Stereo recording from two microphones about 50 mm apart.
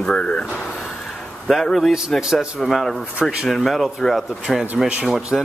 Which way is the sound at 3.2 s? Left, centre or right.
Centre.